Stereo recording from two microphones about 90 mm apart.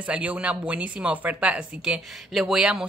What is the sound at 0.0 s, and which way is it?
Speech, 15° right (ahead or behind).